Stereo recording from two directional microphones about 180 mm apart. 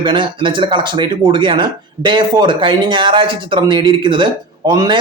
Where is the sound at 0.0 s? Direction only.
25° right (ahead or behind).